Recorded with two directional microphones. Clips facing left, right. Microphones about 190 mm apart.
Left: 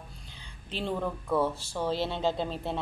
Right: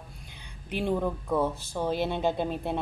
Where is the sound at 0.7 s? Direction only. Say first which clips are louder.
Right 4 dB; 10° right (ahead or behind).